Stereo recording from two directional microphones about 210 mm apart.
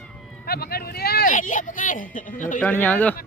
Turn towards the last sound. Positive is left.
turn(degrees=10)  # may be behind; listen again after turning